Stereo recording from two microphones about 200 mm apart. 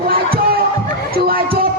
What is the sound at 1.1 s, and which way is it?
Crowd, 50° right (ahead or behind).